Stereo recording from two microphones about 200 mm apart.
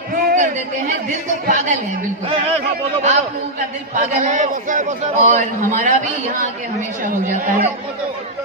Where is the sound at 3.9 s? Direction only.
40° right (ahead or behind).